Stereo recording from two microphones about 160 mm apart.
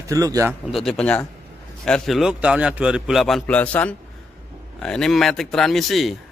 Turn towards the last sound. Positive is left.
turn(degrees=0)  # may be behind; listen again after turning